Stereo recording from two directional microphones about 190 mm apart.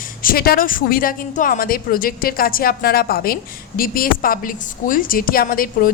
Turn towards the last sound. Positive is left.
turn(degrees=50)  # may be behind; listen again after turning